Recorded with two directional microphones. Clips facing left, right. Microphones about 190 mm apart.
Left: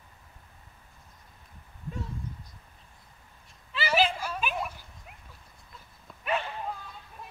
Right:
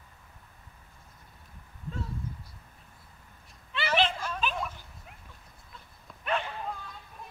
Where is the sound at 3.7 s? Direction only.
5° left (ahead or behind).